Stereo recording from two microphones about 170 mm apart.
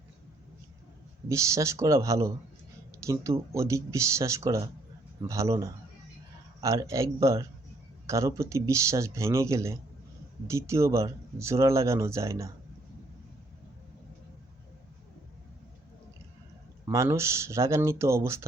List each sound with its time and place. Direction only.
1.3 s a man's voice: 20° right (ahead or behind)
6.8 s speech: 20° right (ahead or behind)
16.8 s speech: 20° right (ahead or behind)